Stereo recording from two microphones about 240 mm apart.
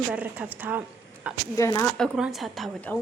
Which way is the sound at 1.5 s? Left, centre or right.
Centre.